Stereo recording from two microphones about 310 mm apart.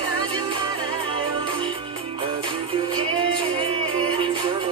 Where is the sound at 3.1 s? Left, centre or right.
Centre.